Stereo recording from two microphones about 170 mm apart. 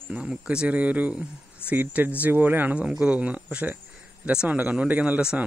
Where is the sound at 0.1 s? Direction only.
5° right (ahead or behind).